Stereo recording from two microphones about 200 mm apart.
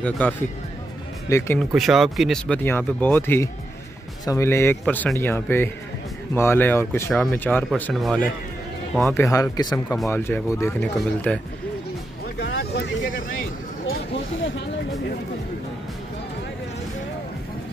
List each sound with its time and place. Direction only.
0.0 s speech: 5° left (ahead or behind)
1.7 s speech: centre (ahead or behind)
9.1 s speech: 15° left (ahead or behind)
12.4 s vehicle: 55° left (ahead or behind)